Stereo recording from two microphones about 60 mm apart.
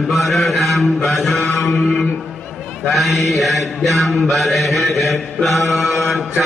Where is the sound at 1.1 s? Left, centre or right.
Centre.